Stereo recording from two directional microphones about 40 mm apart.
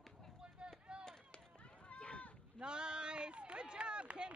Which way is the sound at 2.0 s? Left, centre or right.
Left.